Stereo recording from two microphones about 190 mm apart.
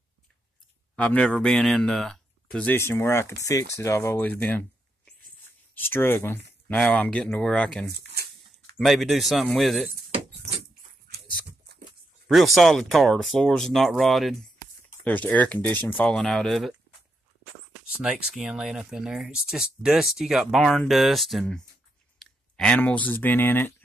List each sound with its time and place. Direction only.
0.9 s speech: 5° left (ahead or behind)
8.1 s a sound: 55° right (ahead or behind)
8.7 s speech: centre (ahead or behind)
12.3 s speech: centre (ahead or behind)
18.0 s speech: 5° right (ahead or behind)